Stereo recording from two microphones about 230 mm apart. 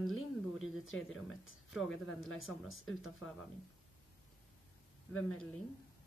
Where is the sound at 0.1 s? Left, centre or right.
Left.